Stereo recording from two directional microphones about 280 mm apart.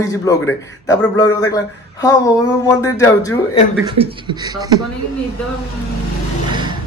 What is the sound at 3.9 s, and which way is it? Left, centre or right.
Speech, centre.